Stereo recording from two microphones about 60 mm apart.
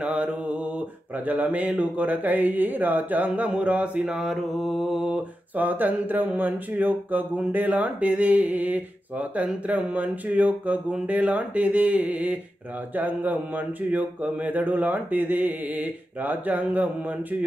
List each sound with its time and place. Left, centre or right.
0.0 s mantra: right
4.0 s mantra: centre
5.1 s a sound: right
6.3 s mantra: right